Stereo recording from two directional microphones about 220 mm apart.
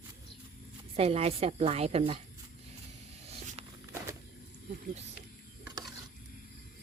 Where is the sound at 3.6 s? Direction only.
25° right (ahead or behind).